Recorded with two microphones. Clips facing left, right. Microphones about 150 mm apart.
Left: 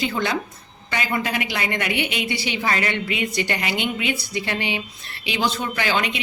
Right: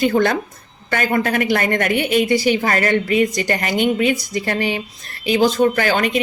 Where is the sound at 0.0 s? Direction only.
50° right (ahead or behind).